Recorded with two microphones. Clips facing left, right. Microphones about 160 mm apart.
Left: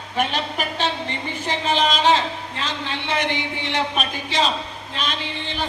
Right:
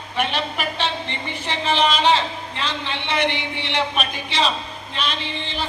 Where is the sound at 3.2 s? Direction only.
45° left (ahead or behind).